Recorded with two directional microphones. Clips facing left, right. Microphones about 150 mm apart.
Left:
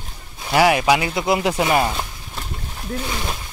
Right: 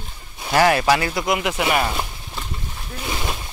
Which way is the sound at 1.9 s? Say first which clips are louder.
Even; centre (ahead or behind).